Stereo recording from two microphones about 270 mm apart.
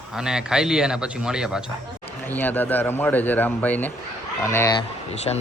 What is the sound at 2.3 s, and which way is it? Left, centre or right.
A man's voice, centre.